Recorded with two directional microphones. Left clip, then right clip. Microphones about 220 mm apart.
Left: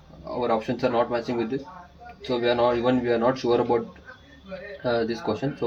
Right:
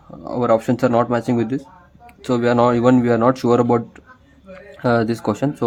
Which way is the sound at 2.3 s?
40° right (ahead or behind).